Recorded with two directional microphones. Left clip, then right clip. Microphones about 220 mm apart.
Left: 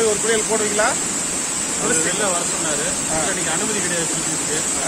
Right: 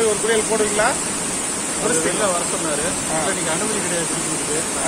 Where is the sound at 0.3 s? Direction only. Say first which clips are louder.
Right 1 dB; 10° right (ahead or behind).